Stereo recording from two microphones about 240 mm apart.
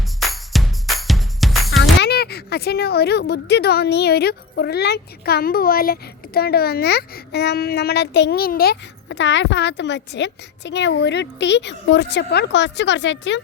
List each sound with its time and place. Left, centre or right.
0.2 s music: centre
1.8 s speech: left